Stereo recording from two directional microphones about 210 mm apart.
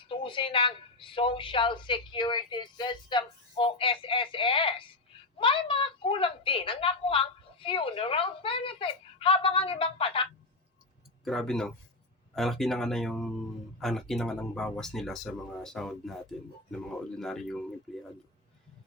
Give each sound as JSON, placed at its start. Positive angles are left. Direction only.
{"t": 0.1, "sound": "a woman's voice", "side_deg": 25}
{"t": 11.3, "sound": "speech", "side_deg": 0}